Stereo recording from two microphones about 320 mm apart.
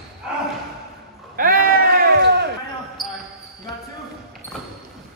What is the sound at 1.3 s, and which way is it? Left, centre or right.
Sheep, right.